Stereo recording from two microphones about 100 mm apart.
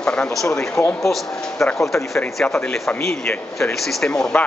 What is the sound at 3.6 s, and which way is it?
Speech, 5° left (ahead or behind).